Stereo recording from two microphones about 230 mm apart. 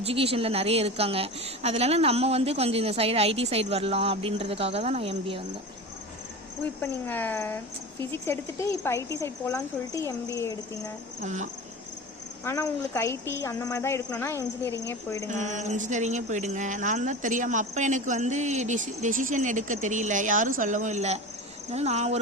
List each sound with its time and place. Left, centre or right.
0.0 s a woman's voice: right
6.8 s speech: centre
11.2 s speech: right
12.5 s speech: centre
15.3 s a woman's voice: right